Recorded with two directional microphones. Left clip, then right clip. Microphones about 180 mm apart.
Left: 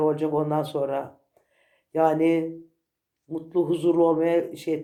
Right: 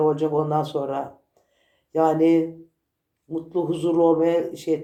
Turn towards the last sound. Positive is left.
turn(degrees=30)  # may be behind; listen again after turning